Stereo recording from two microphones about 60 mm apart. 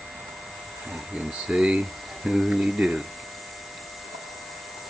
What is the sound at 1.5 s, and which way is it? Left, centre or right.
Speech, centre.